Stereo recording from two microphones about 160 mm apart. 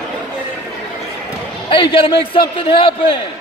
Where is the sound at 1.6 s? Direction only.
35° left (ahead or behind).